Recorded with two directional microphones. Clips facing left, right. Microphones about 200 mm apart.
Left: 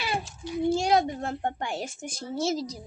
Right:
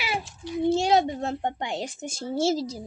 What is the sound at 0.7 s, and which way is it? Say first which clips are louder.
A woman's voice: right 2 dB; 25° right (ahead or behind).